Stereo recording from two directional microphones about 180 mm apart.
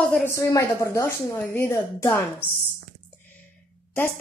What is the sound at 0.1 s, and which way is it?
A woman's voice, 15° left (ahead or behind).